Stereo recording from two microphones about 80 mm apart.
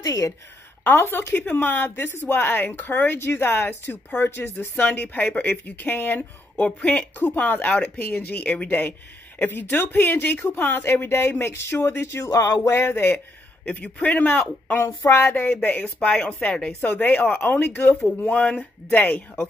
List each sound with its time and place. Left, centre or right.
0.0 s a woman's voice: left
0.9 s speech: left
12.3 s music: left
13.7 s speech: centre